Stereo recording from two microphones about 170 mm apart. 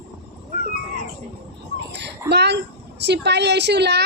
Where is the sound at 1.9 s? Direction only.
90° right.